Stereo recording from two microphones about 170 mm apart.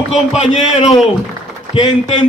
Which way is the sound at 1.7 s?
30° left (ahead or behind).